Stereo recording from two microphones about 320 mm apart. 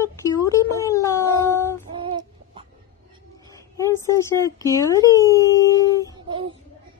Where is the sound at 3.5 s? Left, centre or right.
Centre.